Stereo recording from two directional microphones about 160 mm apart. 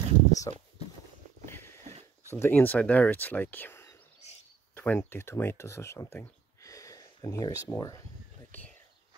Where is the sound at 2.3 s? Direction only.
15° left (ahead or behind).